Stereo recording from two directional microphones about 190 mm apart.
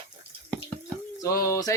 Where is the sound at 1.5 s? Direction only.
20° left (ahead or behind).